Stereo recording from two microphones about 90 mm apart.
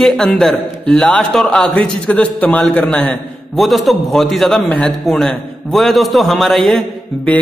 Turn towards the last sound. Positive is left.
turn(degrees=15)  # may be behind; listen again after turning